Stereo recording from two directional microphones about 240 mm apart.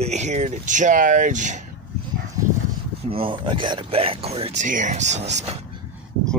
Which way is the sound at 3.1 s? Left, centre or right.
Right.